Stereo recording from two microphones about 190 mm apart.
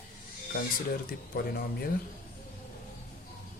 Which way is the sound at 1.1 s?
55° left (ahead or behind).